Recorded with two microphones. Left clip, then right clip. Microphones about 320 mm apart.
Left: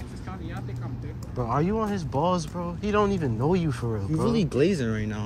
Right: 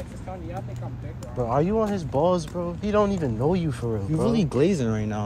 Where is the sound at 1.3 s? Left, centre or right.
Centre.